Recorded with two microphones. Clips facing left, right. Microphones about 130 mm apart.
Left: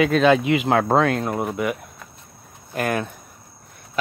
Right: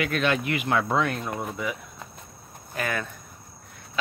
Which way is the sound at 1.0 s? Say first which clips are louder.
Left 7 dB; 80° left.